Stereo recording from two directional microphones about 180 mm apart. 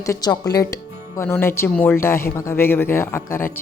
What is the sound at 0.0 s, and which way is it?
Speech, 20° left (ahead or behind).